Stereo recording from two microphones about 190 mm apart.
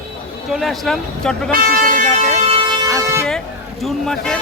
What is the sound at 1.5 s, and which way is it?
Vehicle, 50° right (ahead or behind).